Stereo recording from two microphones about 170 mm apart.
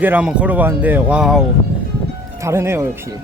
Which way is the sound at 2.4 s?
15° right (ahead or behind).